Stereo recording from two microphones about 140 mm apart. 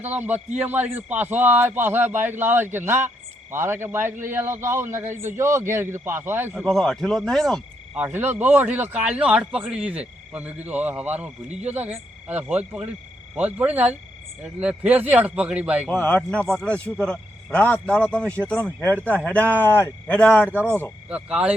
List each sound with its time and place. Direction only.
0.0 s a man's voice: 10° right (ahead or behind)
6.7 s speech: 5° left (ahead or behind)
7.9 s a man's voice: 15° right (ahead or behind)
15.9 s speech: 10° left (ahead or behind)
21.1 s a man's voice: 10° right (ahead or behind)